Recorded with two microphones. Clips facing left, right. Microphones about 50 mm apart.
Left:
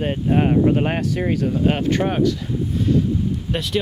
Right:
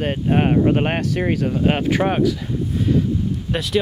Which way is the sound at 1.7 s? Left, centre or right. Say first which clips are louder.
Right 1 dB; centre.